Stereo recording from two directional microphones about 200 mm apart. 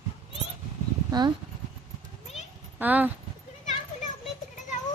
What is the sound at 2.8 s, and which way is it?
Speech, 10° right (ahead or behind).